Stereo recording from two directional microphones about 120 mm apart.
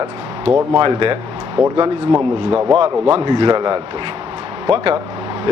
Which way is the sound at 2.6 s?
40° right (ahead or behind).